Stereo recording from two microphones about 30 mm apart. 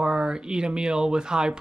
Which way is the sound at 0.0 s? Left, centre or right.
Right.